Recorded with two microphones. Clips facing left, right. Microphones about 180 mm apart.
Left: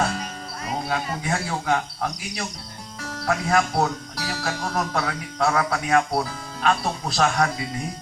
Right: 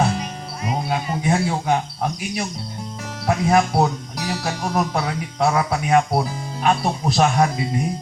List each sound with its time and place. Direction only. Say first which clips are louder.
0.0 s music: right 4 dB; 15° right (ahead or behind)
3.2 s speech: right 4 dB; 25° right (ahead or behind)